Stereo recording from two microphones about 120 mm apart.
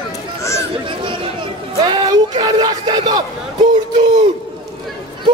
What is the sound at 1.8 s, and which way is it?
Speech, 30° right (ahead or behind).